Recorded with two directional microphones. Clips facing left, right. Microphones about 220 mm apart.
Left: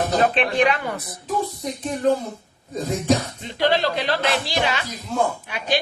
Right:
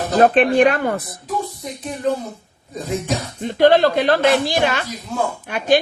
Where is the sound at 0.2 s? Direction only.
50° right (ahead or behind).